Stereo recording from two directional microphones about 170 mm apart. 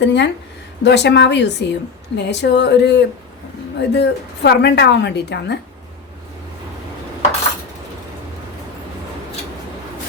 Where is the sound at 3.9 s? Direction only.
80° left.